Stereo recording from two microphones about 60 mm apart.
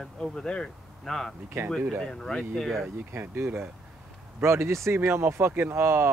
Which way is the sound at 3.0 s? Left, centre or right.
Right.